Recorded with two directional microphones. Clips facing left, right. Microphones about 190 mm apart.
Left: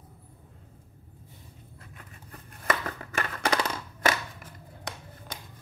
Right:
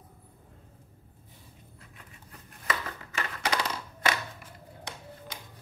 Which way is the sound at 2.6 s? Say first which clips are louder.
Left 4 dB; 50° left (ahead or behind).